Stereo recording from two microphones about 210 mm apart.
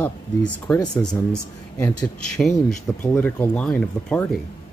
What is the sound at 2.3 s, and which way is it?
Speech, 10° left (ahead or behind).